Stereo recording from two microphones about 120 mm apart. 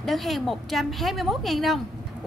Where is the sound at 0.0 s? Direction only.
Centre (ahead or behind).